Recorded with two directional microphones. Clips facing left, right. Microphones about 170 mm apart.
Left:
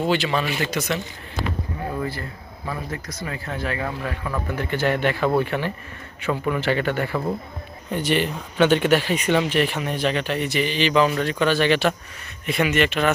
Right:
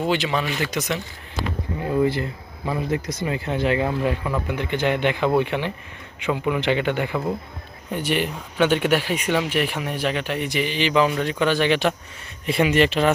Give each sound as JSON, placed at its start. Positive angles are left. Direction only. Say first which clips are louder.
{"t": 0.0, "sound": "speech", "louder": "left 1 dB", "side_deg": -15}
{"t": 2.0, "sound": "speech", "louder": "right 8 dB", "side_deg": -20}
{"t": 4.5, "sound": "a man's voice", "louder": "right 1 dB", "side_deg": 45}
{"t": 5.0, "sound": "speech", "louder": "right 1 dB", "side_deg": -15}
{"t": 12.5, "sound": "speech", "louder": "right 2 dB", "side_deg": -30}